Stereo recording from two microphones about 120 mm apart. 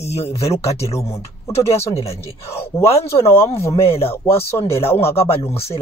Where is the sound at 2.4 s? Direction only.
20° left (ahead or behind).